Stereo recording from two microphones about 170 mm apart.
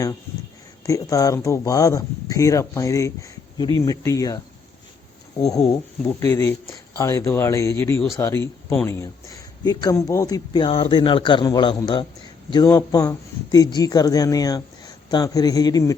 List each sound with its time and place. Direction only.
0.9 s speech: 20° left (ahead or behind)
5.4 s speech: 5° left (ahead or behind)
6.2 s speech: 15° left (ahead or behind)